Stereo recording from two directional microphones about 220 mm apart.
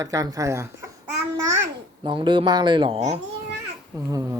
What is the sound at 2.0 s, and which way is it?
Speech, 20° right (ahead or behind).